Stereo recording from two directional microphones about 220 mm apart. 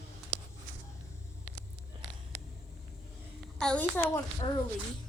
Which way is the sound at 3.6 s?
5° left (ahead or behind).